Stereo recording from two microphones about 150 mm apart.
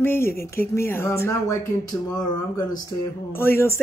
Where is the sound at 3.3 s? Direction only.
15° left (ahead or behind).